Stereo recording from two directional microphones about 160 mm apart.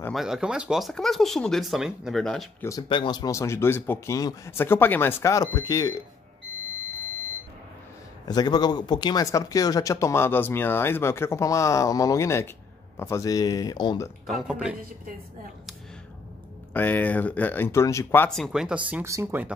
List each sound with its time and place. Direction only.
0.1 s speech: centre (ahead or behind)
2.9 s speech: 30° left (ahead or behind)
8.3 s speech: 25° left (ahead or behind)
14.2 s speech: 5° right (ahead or behind)
16.7 s speech: 10° left (ahead or behind)
18.3 s speech: centre (ahead or behind)
18.9 s speech: 15° right (ahead or behind)